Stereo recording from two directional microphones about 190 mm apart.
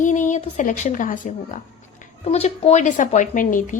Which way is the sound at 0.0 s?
40° left (ahead or behind).